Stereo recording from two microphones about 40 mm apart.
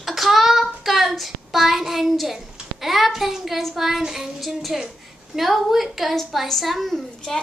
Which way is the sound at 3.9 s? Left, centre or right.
Centre.